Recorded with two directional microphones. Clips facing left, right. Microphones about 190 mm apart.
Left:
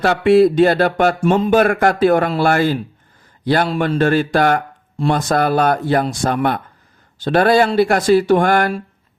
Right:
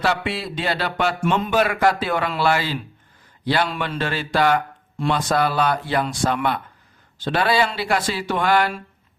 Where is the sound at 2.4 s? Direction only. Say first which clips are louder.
Left 6 dB; 50° left (ahead or behind).